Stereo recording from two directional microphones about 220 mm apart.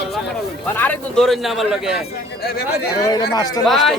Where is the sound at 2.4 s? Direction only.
45° left (ahead or behind).